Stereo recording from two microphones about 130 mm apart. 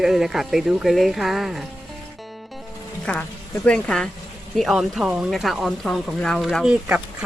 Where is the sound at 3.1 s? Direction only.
10° left (ahead or behind).